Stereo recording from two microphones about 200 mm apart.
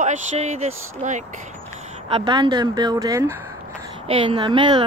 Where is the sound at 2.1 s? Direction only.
25° right (ahead or behind).